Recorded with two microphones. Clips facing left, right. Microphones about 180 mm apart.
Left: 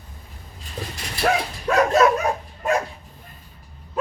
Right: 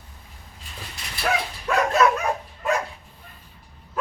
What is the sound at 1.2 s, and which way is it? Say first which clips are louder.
Dog: left 4 dB; 45° left (ahead or behind).